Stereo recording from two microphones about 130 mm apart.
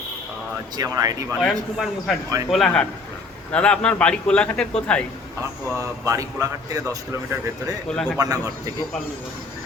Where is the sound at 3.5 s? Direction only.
10° left (ahead or behind).